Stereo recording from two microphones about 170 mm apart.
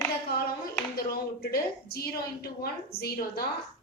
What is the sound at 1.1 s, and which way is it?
A woman's voice, 65° left (ahead or behind).